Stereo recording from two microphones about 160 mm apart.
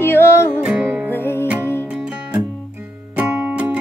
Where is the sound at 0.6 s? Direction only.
10° right (ahead or behind).